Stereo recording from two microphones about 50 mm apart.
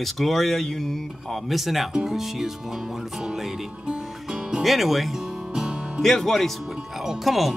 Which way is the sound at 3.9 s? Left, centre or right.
Centre.